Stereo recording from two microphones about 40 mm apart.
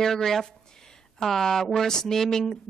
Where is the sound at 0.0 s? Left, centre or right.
Centre.